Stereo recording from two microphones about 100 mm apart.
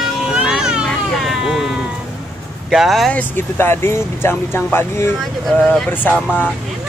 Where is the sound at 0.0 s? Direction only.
5° right (ahead or behind).